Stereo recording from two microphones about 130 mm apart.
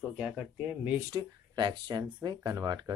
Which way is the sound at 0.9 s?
30° right (ahead or behind).